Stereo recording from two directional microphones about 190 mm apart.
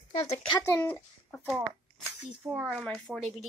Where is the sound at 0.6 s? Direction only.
15° left (ahead or behind).